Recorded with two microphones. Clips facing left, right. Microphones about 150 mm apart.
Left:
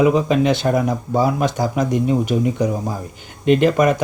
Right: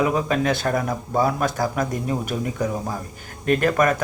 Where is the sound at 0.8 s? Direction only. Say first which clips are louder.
Left 4 dB; 15° left (ahead or behind).